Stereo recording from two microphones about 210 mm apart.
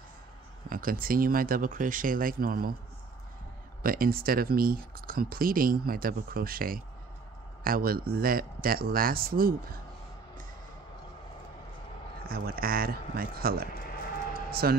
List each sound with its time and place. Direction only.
0.7 s speech: 40° right (ahead or behind)
3.8 s speech: 45° right (ahead or behind)
12.2 s speech: 45° right (ahead or behind)